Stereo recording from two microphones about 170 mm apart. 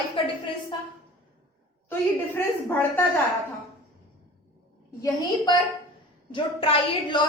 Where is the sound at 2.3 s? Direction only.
10° left (ahead or behind).